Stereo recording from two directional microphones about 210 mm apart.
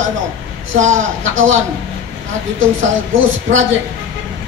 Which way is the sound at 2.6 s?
70° right (ahead or behind).